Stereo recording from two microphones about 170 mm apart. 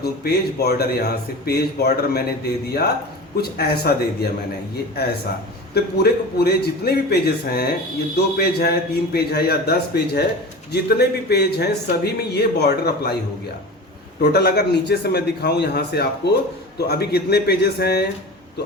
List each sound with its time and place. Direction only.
0.0 s a man's voice: 70° left (ahead or behind)
3.6 s a man's voice: 65° left (ahead or behind)
14.2 s a man's voice: 70° left (ahead or behind)